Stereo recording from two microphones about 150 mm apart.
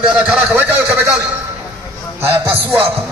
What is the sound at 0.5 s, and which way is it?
Speech, 15° right (ahead or behind).